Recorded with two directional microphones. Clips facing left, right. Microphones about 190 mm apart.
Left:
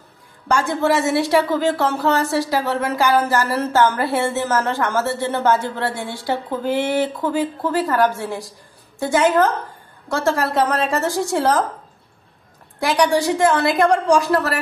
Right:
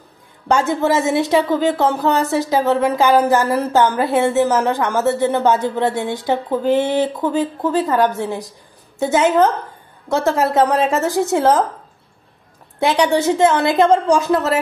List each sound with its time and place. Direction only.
0.5 s speech: 20° right (ahead or behind)
13.2 s speech: 25° right (ahead or behind)